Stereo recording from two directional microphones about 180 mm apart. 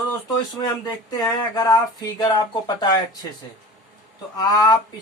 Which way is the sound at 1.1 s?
20° left (ahead or behind).